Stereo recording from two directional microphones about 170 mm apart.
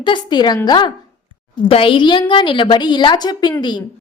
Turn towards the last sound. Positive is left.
turn(degrees=25)  # may be behind; listen again after turning